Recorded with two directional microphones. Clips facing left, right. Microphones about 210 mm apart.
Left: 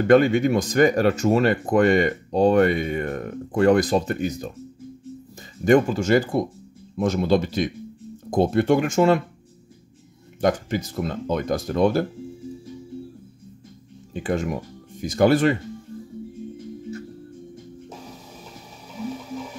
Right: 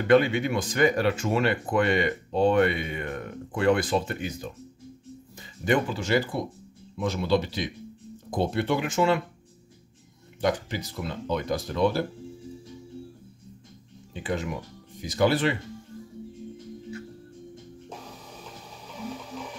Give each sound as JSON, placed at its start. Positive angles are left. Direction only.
{"t": 0.0, "sound": "speech", "side_deg": 45}
{"t": 5.7, "sound": "speech", "side_deg": 45}
{"t": 10.4, "sound": "speech", "side_deg": 50}
{"t": 14.1, "sound": "speech", "side_deg": 45}